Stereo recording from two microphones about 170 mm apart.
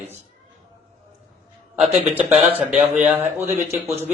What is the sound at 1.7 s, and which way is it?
A man's voice, 5° right (ahead or behind).